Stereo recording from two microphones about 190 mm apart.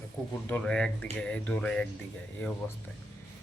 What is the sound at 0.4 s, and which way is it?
A man's voice, 5° left (ahead or behind).